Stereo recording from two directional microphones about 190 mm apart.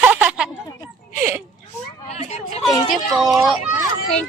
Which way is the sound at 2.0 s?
35° left (ahead or behind).